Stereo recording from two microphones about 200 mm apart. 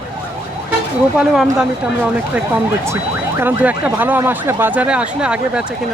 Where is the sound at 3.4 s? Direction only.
10° right (ahead or behind).